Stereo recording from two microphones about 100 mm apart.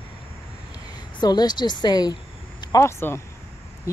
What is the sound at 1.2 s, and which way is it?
Speech, 45° left (ahead or behind).